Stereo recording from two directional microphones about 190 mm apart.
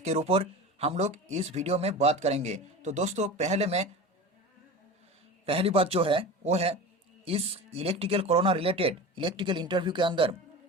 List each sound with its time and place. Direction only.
0.0 s speech: 35° right (ahead or behind)
5.5 s speech: 30° right (ahead or behind)